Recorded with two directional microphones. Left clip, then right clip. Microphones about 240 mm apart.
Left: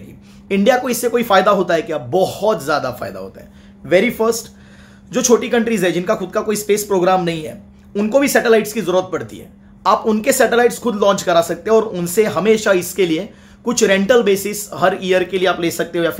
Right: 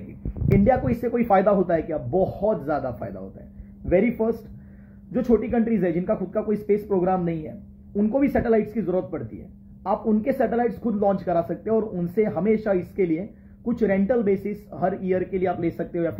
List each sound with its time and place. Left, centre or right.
0.7 s speech: centre